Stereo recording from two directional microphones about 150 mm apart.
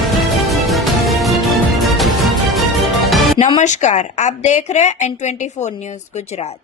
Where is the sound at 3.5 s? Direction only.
50° left (ahead or behind).